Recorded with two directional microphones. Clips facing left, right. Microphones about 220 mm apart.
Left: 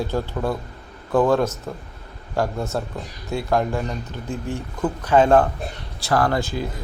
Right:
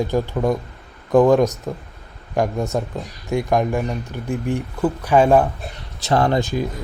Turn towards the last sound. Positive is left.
turn(degrees=-15)  # may be behind; listen again after turning